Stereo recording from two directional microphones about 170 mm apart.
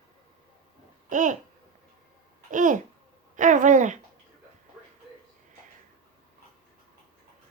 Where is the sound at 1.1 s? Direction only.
50° right (ahead or behind).